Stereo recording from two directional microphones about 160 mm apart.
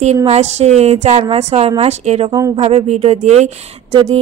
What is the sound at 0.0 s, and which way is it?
A woman's voice, 40° right (ahead or behind).